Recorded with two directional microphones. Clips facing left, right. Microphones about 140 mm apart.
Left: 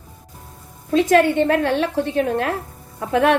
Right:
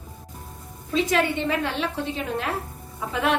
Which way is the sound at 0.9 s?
55° left (ahead or behind).